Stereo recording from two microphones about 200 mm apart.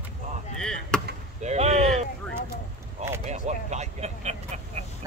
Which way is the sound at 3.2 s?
35° right (ahead or behind).